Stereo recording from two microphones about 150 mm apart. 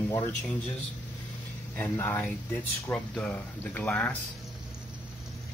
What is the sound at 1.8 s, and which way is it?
Speech, 15° left (ahead or behind).